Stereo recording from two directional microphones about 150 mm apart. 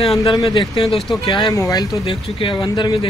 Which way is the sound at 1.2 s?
30° left (ahead or behind).